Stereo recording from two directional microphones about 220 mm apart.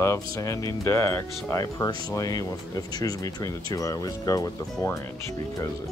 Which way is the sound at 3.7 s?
15° left (ahead or behind).